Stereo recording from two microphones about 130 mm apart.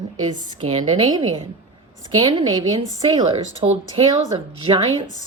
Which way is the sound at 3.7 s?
55° right (ahead or behind).